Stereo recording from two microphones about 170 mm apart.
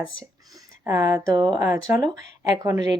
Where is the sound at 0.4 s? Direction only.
20° right (ahead or behind).